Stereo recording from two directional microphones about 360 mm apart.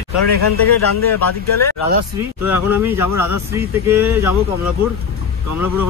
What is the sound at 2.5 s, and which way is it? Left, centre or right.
Speech, centre.